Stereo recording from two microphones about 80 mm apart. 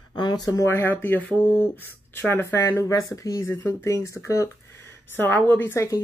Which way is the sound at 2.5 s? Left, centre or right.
Left.